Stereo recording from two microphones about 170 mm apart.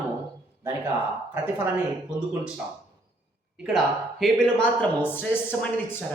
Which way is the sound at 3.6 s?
Centre (ahead or behind).